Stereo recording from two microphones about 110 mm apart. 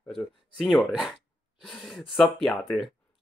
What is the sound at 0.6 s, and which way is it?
Speech, centre (ahead or behind).